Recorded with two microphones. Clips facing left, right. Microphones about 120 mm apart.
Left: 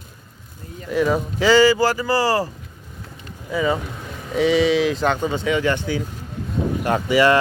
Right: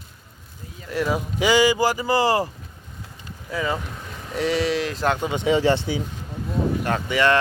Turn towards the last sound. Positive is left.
turn(degrees=10)  # may be behind; listen again after turning